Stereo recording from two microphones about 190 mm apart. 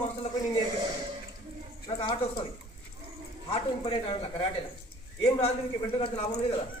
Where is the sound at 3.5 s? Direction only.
30° left (ahead or behind).